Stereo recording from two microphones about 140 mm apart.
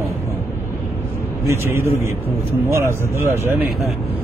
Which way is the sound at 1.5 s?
20° right (ahead or behind).